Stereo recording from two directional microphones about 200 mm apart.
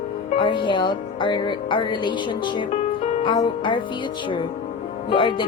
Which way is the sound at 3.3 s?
25° left (ahead or behind).